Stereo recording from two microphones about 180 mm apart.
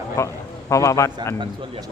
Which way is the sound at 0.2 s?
15° left (ahead or behind).